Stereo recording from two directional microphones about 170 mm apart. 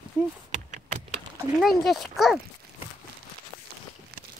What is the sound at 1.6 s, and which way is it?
Speech, centre (ahead or behind).